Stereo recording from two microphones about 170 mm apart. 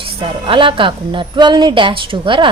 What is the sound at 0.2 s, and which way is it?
Speech, 30° right (ahead or behind).